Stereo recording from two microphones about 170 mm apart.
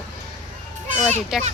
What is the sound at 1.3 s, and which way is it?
Speech, 5° right (ahead or behind).